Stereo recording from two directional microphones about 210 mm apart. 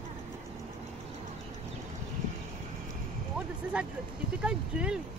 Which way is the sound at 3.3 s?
5° right (ahead or behind).